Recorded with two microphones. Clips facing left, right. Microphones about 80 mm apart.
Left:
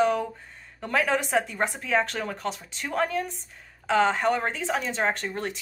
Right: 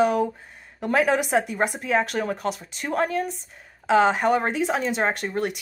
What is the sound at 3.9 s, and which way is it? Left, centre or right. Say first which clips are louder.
Speech: right 4 dB; centre.